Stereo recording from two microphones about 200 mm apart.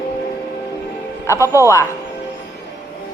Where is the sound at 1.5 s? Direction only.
15° left (ahead or behind).